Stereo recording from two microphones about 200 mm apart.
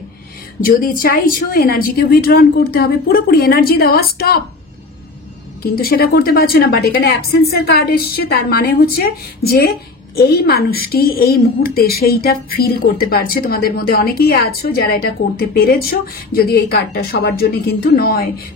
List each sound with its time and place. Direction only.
0.7 s a woman's voice: 45° left (ahead or behind)
5.6 s a woman's voice: 50° left (ahead or behind)